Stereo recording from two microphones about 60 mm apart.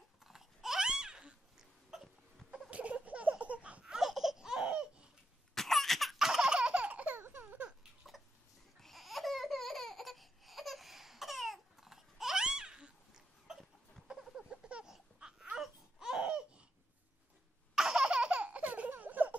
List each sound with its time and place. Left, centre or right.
0.2 s babbling: centre
2.7 s baby laughter: right
4.1 s laughter: centre
5.5 s laughter: centre
6.1 s baby laughter: centre; by 7.2 s right
7.2 s a sound: right
8.7 s laughter: centre
14.1 s a sound: centre
15.5 s laughter: centre
17.7 s baby laughter: centre
18.9 s a sound: right